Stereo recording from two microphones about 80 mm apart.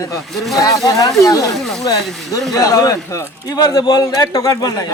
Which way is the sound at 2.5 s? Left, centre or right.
Left.